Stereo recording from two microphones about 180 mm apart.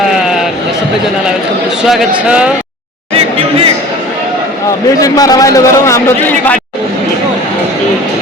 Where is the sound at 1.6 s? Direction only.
Centre (ahead or behind).